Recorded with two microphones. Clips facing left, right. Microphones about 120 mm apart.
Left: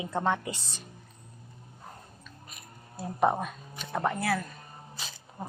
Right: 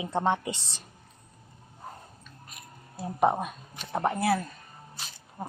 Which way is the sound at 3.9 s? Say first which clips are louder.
Right 3 dB; 25° right (ahead or behind).